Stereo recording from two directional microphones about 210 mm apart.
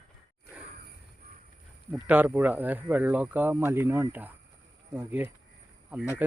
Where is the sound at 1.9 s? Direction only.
5° right (ahead or behind).